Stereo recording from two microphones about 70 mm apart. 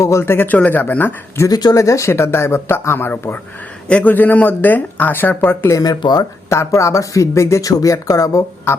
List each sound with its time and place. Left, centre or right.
0.0 s speech: left
1.5 s speech: left
1.7 s speech: left
3.8 s a man's voice: centre
5.8 s speech: left
6.5 s speech: left